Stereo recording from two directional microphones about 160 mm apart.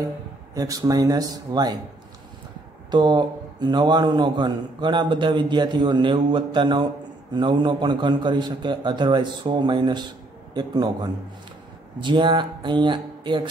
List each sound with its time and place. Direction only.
0.6 s a man's voice: 20° right (ahead or behind)
2.9 s a man's voice: 30° right (ahead or behind)